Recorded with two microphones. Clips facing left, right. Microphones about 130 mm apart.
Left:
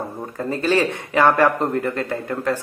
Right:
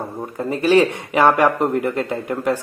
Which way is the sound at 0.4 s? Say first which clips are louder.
Right 4 dB; 15° right (ahead or behind).